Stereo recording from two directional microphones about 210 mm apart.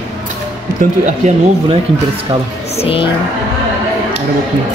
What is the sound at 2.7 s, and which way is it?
Speech, 25° left (ahead or behind).